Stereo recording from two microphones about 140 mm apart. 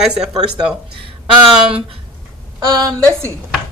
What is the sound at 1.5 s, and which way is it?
Speech, 5° right (ahead or behind).